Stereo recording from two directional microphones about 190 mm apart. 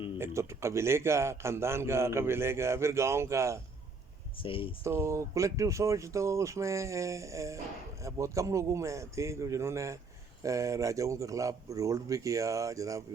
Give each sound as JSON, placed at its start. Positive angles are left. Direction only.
{"t": 0.2, "sound": "a man's voice", "side_deg": -15}
{"t": 4.4, "sound": "speech", "side_deg": 25}
{"t": 4.8, "sound": "a man's voice", "side_deg": -15}